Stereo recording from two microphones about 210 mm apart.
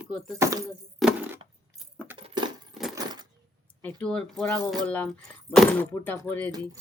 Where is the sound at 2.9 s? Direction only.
20° right (ahead or behind).